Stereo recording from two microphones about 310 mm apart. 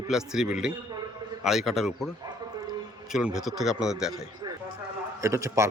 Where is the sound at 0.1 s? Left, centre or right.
Centre.